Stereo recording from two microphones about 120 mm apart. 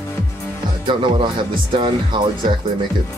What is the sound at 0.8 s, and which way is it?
Speech, 45° right (ahead or behind).